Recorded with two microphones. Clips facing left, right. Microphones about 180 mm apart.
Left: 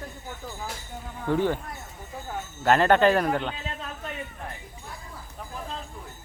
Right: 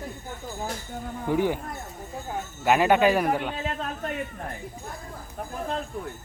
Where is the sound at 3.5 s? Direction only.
50° right (ahead or behind).